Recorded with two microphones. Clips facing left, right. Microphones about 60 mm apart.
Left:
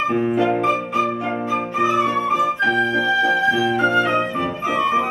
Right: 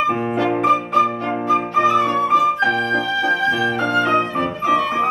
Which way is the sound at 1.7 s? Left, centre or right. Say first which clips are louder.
Right 1 dB; centre.